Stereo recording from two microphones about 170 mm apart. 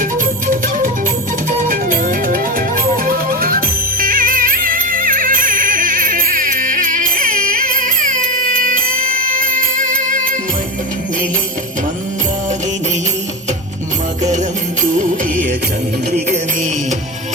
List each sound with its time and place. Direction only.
0.0 s music: 55° right (ahead or behind)
14.2 s music: 45° right (ahead or behind)